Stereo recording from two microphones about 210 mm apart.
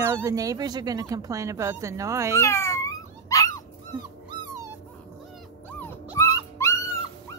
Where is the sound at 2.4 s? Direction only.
15° left (ahead or behind).